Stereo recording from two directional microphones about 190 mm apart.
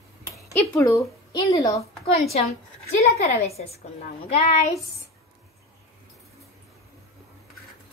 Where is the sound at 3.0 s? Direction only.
35° left (ahead or behind).